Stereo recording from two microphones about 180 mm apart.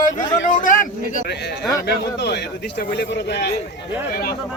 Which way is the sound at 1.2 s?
70° left (ahead or behind).